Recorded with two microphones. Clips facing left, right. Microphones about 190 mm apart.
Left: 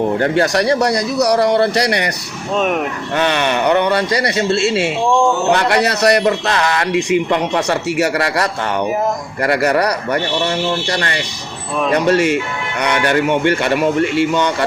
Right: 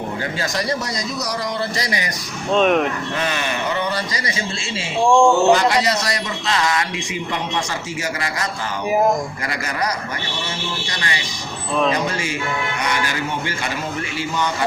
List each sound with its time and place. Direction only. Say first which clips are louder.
0.2 s speech: left 10 dB; 65° left (ahead or behind)
2.6 s speech: right 1 dB; 5° left (ahead or behind)
3.2 s speech: left 11 dB; 70° left (ahead or behind)
5.0 s speech: right 2 dB; 5° left (ahead or behind)
5.5 s a man's voice: left 1 dB; 65° left (ahead or behind)
11.9 s a man's voice: left 10 dB; 70° left (ahead or behind)